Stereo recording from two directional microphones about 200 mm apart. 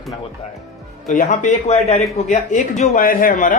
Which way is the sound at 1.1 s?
40° left (ahead or behind).